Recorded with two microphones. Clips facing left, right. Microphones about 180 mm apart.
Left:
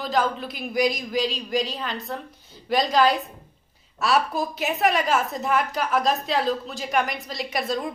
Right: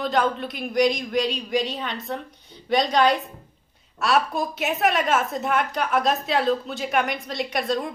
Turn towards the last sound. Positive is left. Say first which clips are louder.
# right 2 dB
turn(degrees=0)  # may be behind; listen again after turning